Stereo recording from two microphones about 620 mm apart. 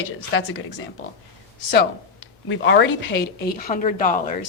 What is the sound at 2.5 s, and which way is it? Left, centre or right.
Speech, centre.